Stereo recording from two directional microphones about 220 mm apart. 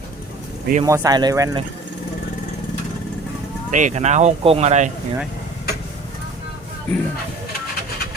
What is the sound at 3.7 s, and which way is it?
Speech, 35° right (ahead or behind).